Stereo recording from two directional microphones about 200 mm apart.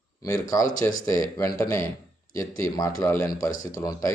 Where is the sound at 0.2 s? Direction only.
15° left (ahead or behind).